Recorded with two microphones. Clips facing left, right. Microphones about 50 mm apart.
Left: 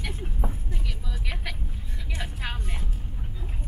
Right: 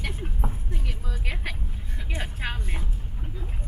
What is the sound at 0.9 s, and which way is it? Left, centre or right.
Music, right.